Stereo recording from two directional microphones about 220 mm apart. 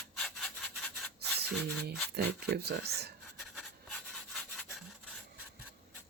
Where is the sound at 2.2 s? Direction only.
45° right (ahead or behind).